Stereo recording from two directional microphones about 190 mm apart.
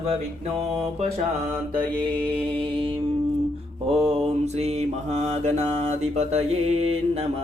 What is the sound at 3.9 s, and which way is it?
Mantra, 30° right (ahead or behind).